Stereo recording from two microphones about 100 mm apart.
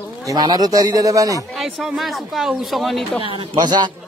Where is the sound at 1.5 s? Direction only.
Centre (ahead or behind).